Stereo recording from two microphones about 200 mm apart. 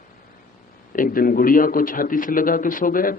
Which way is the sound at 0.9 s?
45° left (ahead or behind).